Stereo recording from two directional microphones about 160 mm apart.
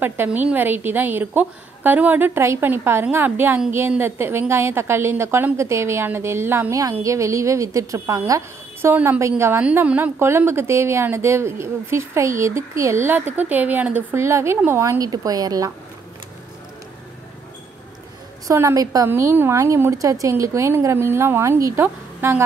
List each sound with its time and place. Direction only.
0.0 s a woman's voice: 10° right (ahead or behind)
18.5 s a woman's voice: 20° right (ahead or behind)